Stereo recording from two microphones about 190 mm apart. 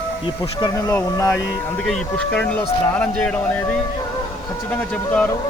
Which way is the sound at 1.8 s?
5° left (ahead or behind).